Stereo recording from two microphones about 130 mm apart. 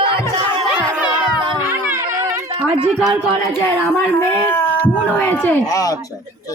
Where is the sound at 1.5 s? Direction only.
15° right (ahead or behind).